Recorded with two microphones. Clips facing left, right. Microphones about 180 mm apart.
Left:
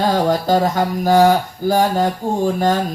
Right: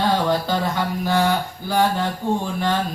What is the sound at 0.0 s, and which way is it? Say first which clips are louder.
Mantra: left 3 dB; 40° left (ahead or behind).